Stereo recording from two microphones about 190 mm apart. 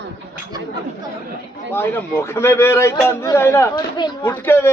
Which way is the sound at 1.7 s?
10° left (ahead or behind).